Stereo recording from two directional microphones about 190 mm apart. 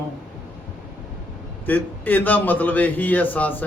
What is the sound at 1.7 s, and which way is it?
Speech, 10° left (ahead or behind).